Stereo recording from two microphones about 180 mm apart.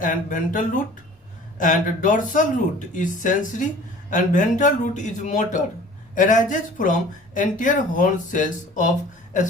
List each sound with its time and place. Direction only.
0.0 s speech: 45° left (ahead or behind)